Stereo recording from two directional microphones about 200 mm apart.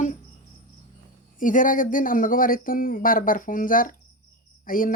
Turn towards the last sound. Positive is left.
turn(degrees=45)  # may be behind; listen again after turning